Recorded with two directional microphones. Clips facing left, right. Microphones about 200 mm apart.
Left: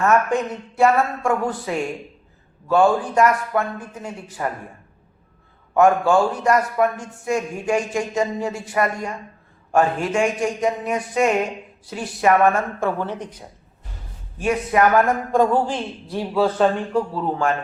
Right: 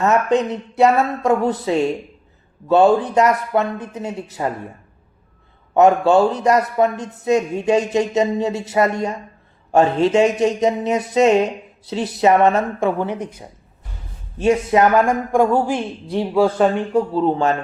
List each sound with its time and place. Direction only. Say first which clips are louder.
0.0 s speech: right 2 dB; 20° right (ahead or behind)
5.7 s speech: right 3 dB; 20° right (ahead or behind)
14.3 s speech: right 4 dB; 25° right (ahead or behind)
16.9 s speech: right 5 dB; 25° right (ahead or behind)